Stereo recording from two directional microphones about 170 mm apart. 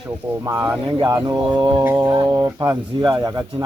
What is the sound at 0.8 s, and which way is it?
Speech, 25° right (ahead or behind).